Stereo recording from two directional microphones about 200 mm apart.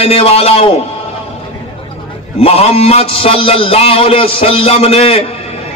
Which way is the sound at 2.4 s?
30° left (ahead or behind).